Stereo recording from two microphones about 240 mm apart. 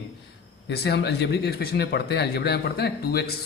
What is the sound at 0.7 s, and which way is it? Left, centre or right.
Speech, left.